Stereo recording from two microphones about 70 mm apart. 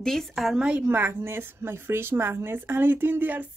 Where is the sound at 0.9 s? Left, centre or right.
Right.